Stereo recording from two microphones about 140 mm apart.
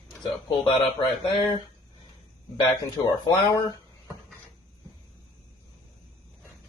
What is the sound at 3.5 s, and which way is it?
Speech, 25° left (ahead or behind).